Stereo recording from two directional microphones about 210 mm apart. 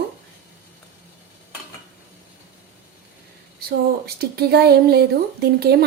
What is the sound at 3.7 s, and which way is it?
Speech, 50° right (ahead or behind).